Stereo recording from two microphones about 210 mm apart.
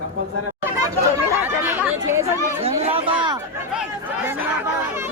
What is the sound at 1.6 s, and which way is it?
Speech, 10° right (ahead or behind).